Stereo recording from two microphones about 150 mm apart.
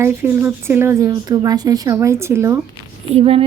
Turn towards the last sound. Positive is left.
turn(degrees=-40)  # may be behind; listen again after turning